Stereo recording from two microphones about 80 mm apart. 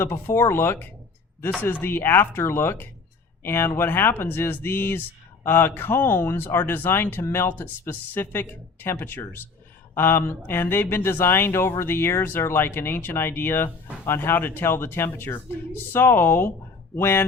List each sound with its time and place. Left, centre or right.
0.0 s speech: left